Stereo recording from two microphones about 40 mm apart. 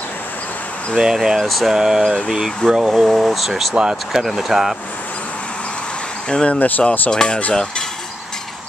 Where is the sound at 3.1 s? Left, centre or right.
Centre.